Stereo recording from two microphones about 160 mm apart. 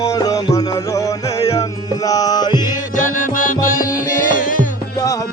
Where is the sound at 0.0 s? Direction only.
20° left (ahead or behind).